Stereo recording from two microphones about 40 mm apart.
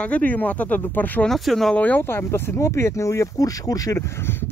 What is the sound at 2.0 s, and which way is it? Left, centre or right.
Speech, left.